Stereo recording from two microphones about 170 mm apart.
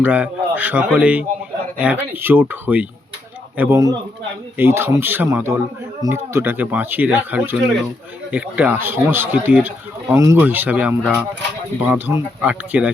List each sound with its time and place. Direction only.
0.0 s speech: 10° right (ahead or behind)